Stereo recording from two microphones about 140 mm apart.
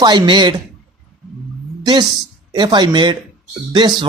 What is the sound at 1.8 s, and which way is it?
A woman's voice, 30° right (ahead or behind).